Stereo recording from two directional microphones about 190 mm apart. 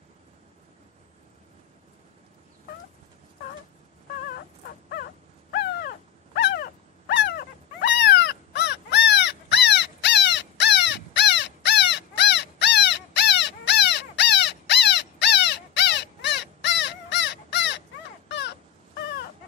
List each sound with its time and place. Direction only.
5.5 s dog: 55° left (ahead or behind)
8.0 s crow: 65° left (ahead or behind)
18.3 s dog: 65° left (ahead or behind)